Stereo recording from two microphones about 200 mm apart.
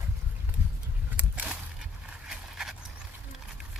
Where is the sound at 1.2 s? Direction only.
10° right (ahead or behind).